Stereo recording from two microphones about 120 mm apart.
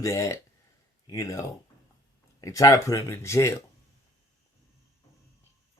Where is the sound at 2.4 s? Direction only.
25° left (ahead or behind).